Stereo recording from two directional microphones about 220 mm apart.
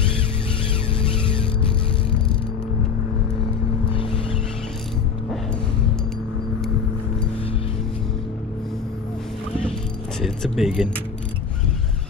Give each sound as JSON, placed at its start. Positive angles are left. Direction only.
{"t": 10.2, "sound": "speech", "side_deg": 0}